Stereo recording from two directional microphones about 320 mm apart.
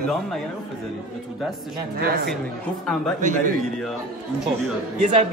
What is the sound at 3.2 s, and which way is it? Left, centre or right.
Speech, right.